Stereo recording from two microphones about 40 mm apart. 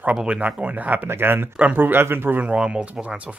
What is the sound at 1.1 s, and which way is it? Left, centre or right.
Speech, right.